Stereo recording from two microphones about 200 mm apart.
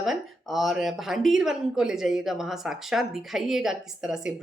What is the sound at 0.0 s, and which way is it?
Speech, centre (ahead or behind).